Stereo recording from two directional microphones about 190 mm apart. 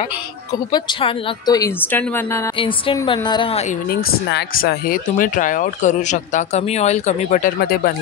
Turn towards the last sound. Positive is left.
turn(degrees=50)  # may be behind; listen again after turning